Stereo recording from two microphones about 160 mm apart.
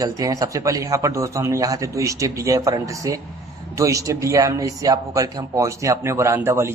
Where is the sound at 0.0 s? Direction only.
20° right (ahead or behind).